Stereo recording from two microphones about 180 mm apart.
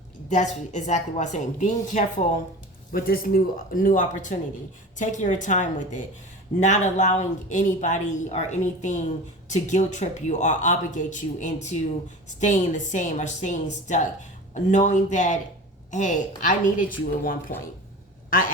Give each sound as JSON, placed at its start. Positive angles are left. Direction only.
{"t": 0.3, "sound": "speech", "side_deg": 40}
{"t": 2.9, "sound": "a woman's voice", "side_deg": 55}